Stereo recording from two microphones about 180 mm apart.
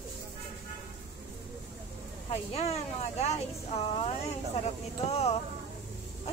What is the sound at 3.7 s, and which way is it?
Speech, 35° left (ahead or behind).